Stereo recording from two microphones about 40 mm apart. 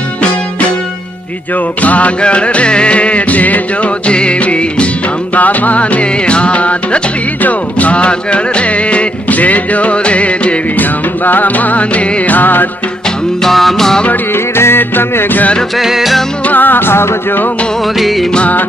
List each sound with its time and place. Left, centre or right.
1.8 s music: left
4.1 s music: left
5.3 s music: left
10.8 s music: left
13.4 s music: centre
14.6 s music: left
15.8 s music: centre
16.4 s music: left